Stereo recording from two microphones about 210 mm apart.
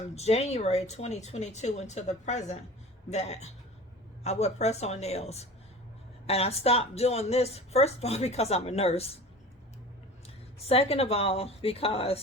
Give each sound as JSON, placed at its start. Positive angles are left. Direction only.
{"t": 0.2, "sound": "speech", "side_deg": 30}
{"t": 10.2, "sound": "speech", "side_deg": 30}